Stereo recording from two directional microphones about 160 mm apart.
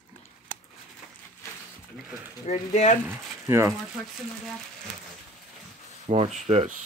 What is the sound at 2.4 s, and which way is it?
Speech, 45° left (ahead or behind).